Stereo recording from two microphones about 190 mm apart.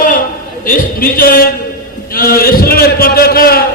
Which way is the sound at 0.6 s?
50° left (ahead or behind).